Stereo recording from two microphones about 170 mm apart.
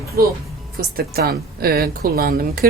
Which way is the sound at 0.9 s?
65° right (ahead or behind).